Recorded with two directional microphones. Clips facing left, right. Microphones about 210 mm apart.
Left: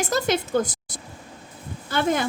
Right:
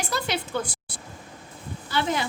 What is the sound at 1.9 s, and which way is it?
Speech, 50° left (ahead or behind).